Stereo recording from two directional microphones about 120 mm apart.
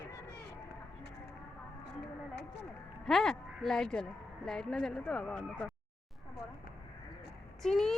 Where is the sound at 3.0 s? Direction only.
5° left (ahead or behind).